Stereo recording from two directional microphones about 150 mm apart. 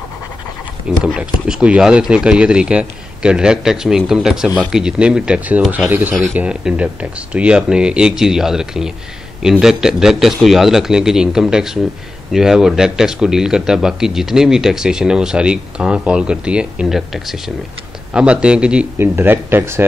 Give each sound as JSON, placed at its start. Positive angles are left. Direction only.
{"t": 0.8, "sound": "speech", "side_deg": -5}